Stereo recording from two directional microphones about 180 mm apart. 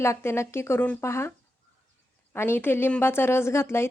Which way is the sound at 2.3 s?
15° left (ahead or behind).